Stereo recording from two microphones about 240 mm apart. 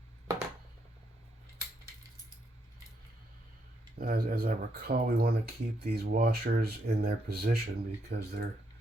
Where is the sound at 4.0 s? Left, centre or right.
Right.